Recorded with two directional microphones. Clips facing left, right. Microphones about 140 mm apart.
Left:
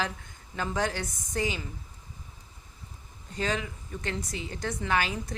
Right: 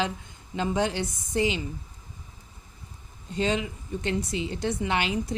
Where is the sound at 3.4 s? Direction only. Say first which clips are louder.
Right 4 dB; 25° right (ahead or behind).